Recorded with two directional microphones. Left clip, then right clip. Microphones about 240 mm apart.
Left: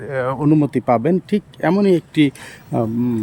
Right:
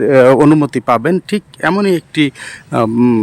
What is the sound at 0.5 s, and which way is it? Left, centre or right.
Speech, centre.